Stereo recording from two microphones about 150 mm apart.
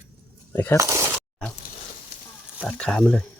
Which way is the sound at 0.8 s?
20° right (ahead or behind).